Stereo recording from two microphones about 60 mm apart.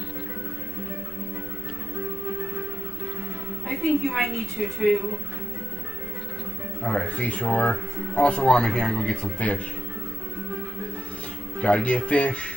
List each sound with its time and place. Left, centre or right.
3.6 s a woman's voice: centre
6.8 s speech: centre
11.6 s speech: centre